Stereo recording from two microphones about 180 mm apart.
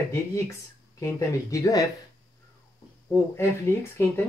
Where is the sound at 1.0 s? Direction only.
15° left (ahead or behind).